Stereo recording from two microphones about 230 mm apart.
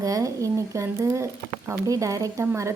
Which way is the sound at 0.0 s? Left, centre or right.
Centre.